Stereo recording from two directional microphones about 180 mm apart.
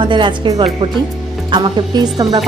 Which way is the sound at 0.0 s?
25° right (ahead or behind).